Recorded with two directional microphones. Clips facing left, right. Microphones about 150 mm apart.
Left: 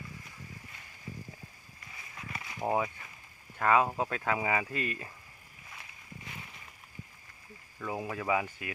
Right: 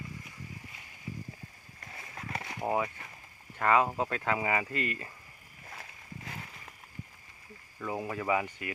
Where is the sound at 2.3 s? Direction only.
65° right (ahead or behind).